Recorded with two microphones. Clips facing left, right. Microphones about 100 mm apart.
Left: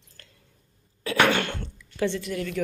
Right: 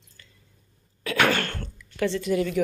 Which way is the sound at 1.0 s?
20° left (ahead or behind).